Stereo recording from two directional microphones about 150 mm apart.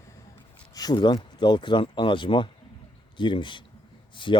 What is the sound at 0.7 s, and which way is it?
Speech, 25° left (ahead or behind).